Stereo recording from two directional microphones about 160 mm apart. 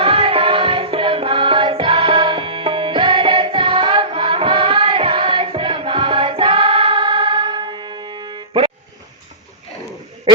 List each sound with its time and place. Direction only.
0.0 s music: 35° right (ahead or behind)